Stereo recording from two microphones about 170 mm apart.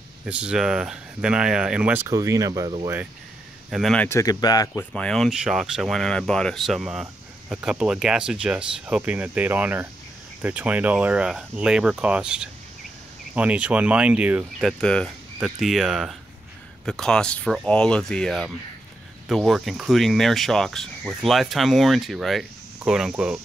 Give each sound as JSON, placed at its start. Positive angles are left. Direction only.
{"t": 0.2, "sound": "speech", "side_deg": -5}
{"t": 3.7, "sound": "speech", "side_deg": 5}
{"t": 4.1, "sound": "speech", "side_deg": 20}
{"t": 4.9, "sound": "speech", "side_deg": 5}